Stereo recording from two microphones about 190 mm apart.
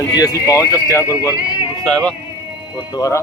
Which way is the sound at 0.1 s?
20° left (ahead or behind).